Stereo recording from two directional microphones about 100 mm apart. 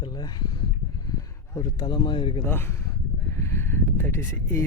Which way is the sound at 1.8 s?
50° left (ahead or behind).